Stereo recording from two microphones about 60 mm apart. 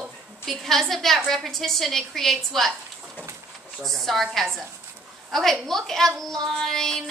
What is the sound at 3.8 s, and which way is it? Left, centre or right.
A woman's voice, centre.